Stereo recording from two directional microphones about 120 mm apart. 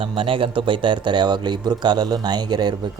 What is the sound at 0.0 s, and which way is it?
Speech, 45° right (ahead or behind).